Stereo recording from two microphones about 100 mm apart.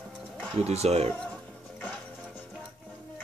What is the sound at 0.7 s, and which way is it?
Speech, 90° right.